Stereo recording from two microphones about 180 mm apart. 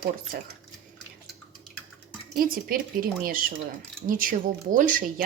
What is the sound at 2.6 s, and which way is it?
A woman's voice, 55° right (ahead or behind).